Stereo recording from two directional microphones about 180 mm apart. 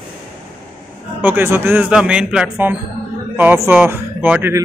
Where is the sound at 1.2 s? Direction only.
10° right (ahead or behind).